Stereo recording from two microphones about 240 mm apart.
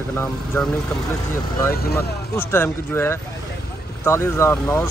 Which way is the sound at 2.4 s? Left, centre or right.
Centre.